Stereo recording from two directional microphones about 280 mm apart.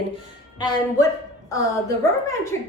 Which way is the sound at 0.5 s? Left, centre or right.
Centre.